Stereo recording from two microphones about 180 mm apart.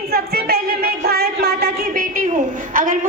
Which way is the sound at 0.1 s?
60° right (ahead or behind).